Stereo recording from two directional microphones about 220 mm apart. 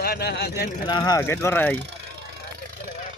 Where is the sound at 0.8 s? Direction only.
15° left (ahead or behind).